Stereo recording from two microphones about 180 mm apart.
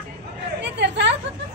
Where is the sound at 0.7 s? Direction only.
75° right (ahead or behind).